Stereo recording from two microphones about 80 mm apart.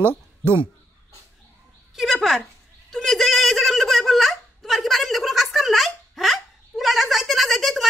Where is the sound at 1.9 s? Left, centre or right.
Centre.